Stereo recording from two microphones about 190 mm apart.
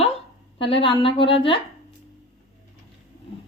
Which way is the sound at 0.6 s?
30° left (ahead or behind).